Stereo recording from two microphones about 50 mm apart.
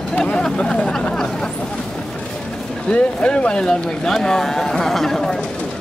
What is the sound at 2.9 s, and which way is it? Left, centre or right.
Speech, left.